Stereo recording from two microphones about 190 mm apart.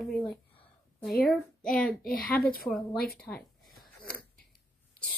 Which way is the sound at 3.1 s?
5° left (ahead or behind).